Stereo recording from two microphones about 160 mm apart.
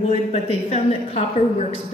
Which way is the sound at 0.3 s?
40° left (ahead or behind).